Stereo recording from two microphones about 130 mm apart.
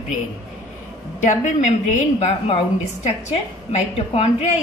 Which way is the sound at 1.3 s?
70° left (ahead or behind).